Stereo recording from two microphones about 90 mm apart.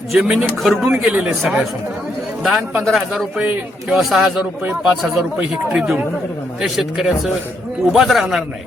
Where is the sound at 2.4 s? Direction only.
10° right (ahead or behind).